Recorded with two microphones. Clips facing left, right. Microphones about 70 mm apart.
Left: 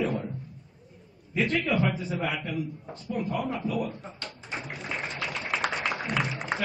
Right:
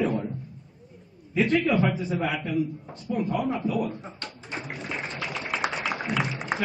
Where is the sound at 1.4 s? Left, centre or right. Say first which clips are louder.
Right 4 dB; centre.